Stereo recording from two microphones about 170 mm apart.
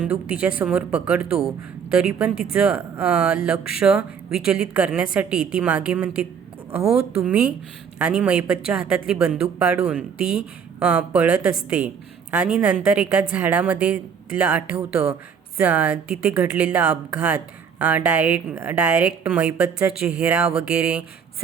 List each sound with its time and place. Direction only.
0.0 s speech: 10° right (ahead or behind)
6.8 s a woman's voice: 35° right (ahead or behind)
7.3 s speech: 5° right (ahead or behind)